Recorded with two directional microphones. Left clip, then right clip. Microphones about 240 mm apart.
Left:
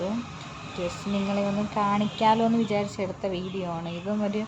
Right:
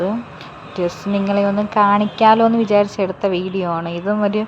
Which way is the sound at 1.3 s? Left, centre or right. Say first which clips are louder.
Right 12 dB; right.